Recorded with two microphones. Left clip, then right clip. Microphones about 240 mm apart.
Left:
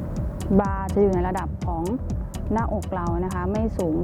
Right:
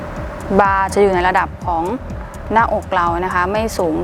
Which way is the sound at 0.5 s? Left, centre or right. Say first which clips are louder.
Right 10 dB; centre.